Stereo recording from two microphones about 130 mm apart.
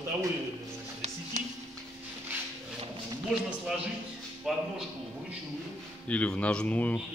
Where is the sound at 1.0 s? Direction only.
60° right (ahead or behind).